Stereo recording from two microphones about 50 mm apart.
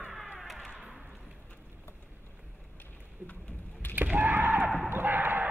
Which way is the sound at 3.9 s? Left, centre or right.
Right.